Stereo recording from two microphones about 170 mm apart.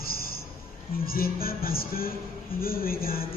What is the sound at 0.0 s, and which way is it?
Music, 60° left (ahead or behind).